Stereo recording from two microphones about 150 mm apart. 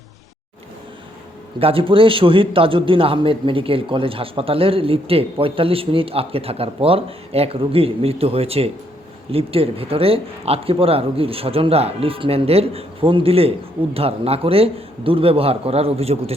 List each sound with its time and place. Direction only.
1.5 s a man's voice: 40° right (ahead or behind)